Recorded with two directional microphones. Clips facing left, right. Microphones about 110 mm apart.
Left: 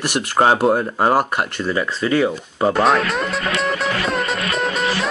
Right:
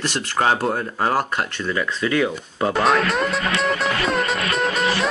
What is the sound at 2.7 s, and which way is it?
Music, centre (ahead or behind).